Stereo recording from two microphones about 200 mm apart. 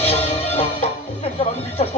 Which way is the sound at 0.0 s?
30° left (ahead or behind).